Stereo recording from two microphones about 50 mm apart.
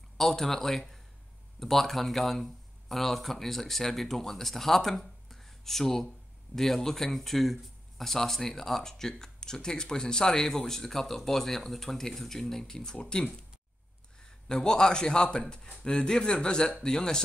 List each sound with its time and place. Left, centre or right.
0.2 s a man's voice: centre
14.5 s speech: centre